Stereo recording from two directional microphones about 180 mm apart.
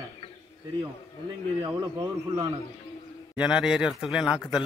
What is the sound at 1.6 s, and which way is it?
Speech, 20° right (ahead or behind).